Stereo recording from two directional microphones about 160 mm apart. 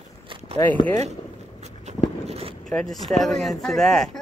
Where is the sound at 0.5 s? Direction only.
15° left (ahead or behind).